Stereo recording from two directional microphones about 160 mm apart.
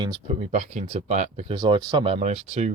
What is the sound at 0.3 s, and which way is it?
Speech, 40° right (ahead or behind).